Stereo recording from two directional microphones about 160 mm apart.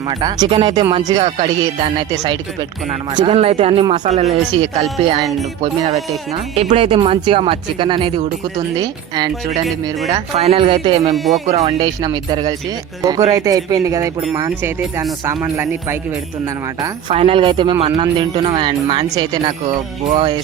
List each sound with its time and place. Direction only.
0.1 s speech: 25° right (ahead or behind)
1.2 s speech: 35° right (ahead or behind)
2.2 s speech: 25° right (ahead or behind)
4.0 s speech: 45° right (ahead or behind)
4.6 s speech: 30° right (ahead or behind)
5.8 s speech: 40° right (ahead or behind); by 9.3 s 25° right (ahead or behind)
10.3 s speech: 40° right (ahead or behind)
11.1 s speech: centre (ahead or behind)
11.4 s speech: 45° right (ahead or behind)
11.8 s speech: 25° right (ahead or behind)
17.2 s speech: 35° right (ahead or behind)